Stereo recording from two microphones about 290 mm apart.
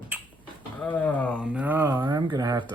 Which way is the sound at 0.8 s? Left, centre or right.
Centre.